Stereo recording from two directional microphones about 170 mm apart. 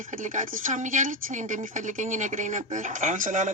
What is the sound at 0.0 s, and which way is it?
Speech, 50° right (ahead or behind).